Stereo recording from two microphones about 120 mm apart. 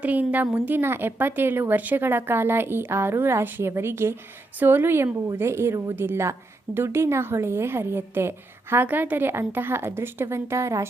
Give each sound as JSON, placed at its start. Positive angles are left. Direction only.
{"t": 0.0, "sound": "a woman's voice", "side_deg": -15}